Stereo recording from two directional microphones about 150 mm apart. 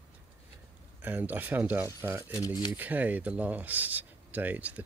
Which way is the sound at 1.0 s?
10° right (ahead or behind).